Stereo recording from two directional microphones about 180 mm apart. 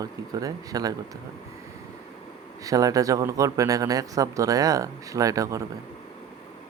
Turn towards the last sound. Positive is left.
turn(degrees=-20)  # may be behind; listen again after turning